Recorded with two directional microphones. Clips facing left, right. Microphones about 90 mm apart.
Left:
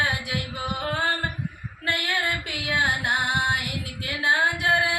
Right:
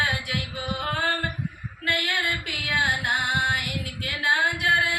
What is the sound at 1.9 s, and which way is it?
Female singing, 25° left (ahead or behind).